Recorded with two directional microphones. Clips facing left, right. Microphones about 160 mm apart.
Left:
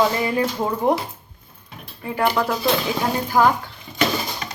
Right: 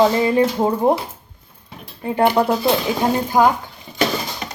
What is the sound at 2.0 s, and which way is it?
Speech, 25° right (ahead or behind).